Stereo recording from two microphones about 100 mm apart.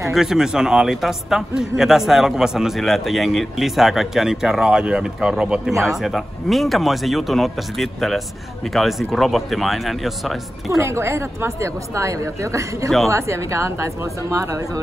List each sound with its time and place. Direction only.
0.1 s a man's voice: 5° right (ahead or behind)
10.7 s a woman's voice: 30° right (ahead or behind)